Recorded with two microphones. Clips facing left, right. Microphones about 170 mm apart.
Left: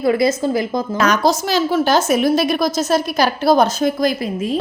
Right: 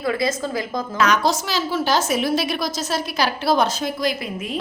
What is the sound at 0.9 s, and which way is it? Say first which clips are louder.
A woman's voice: left 3 dB; 40° left (ahead or behind).